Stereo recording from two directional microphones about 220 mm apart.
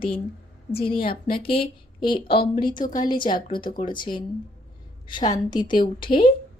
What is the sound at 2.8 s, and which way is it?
Speech, 40° left (ahead or behind).